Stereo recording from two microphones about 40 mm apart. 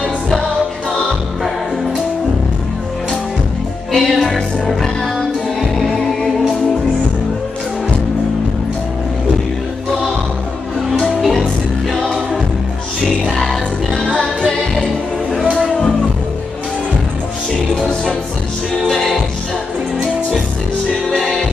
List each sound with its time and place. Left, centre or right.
3.9 s music: centre
11.1 s music: centre
13.0 s music: centre
14.0 s music: left
14.5 s music: centre
18.9 s music: centre
21.1 s music: centre